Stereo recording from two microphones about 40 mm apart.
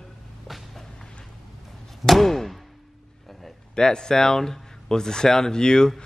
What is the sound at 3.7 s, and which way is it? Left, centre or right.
Speech, centre.